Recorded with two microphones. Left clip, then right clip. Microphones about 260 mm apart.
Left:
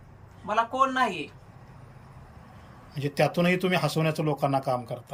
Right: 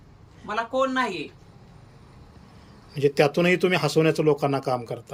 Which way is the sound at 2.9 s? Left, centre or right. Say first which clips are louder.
Right 5 dB; centre.